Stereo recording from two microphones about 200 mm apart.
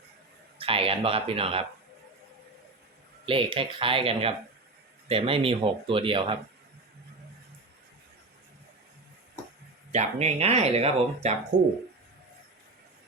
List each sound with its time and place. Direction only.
0.6 s speech: 30° right (ahead or behind)
3.2 s speech: 25° right (ahead or behind)
9.9 s speech: 35° right (ahead or behind)